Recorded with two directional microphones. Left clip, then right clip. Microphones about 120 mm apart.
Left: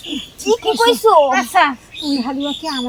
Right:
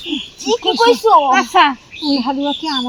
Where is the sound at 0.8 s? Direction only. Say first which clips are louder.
Right 1 dB; 25° left (ahead or behind).